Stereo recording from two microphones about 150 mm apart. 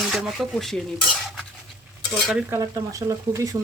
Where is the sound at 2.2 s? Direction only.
Centre (ahead or behind).